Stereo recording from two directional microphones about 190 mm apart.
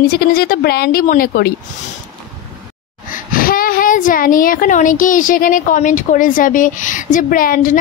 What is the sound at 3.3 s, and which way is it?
A woman's voice, 50° left (ahead or behind).